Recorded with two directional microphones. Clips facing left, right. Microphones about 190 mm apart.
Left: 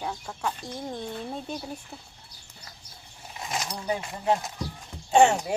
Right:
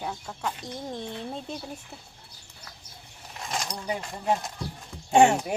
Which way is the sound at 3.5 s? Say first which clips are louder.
Left 1 dB; 5° left (ahead or behind).